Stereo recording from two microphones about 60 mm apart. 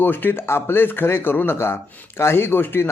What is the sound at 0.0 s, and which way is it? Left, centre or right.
Speech, left.